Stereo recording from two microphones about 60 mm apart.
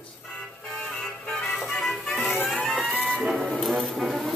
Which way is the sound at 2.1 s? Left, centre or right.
Left.